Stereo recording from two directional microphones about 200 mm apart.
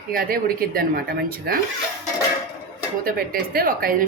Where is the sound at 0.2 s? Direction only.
45° right (ahead or behind).